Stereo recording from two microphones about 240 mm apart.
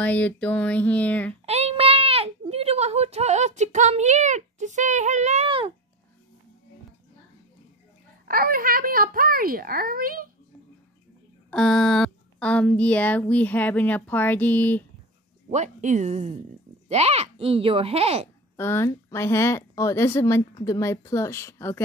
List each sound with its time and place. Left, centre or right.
0.0 s speech: centre
1.4 s a child's voice: right
8.3 s a child's voice: right
11.5 s speech: centre
15.5 s speech: right
18.6 s speech: centre